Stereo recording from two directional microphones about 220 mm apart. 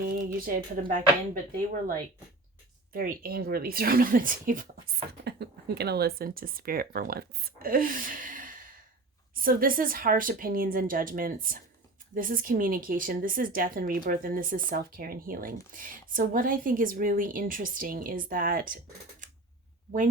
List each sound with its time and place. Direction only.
0.3 s speech: 40° right (ahead or behind)